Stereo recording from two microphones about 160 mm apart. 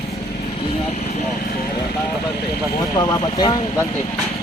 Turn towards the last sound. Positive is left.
turn(degrees=25)  # may be behind; listen again after turning